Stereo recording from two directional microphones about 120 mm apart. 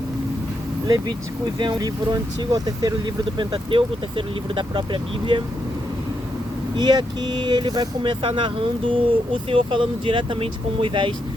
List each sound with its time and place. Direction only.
0.9 s speech: 35° right (ahead or behind)
3.3 s speech: 45° right (ahead or behind)
6.7 s speech: 35° right (ahead or behind)